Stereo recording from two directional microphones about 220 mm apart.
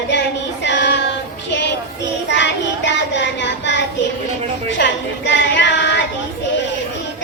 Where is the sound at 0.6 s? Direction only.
55° left (ahead or behind).